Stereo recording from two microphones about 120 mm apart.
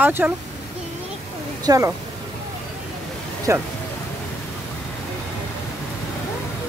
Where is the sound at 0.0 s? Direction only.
15° right (ahead or behind).